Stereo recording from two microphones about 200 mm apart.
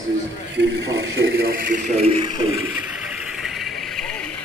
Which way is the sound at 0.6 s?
60° right (ahead or behind).